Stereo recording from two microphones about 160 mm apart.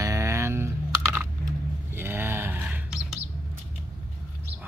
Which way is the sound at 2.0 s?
15° right (ahead or behind).